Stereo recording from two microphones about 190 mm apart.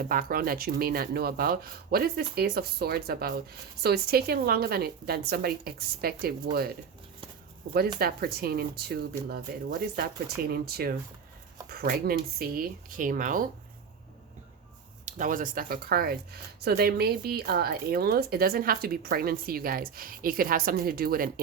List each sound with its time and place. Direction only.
0.1 s speech: 50° right (ahead or behind)
7.9 s speech: 55° right (ahead or behind)
10.5 s speech: 55° right (ahead or behind)
15.0 s speech: 45° right (ahead or behind)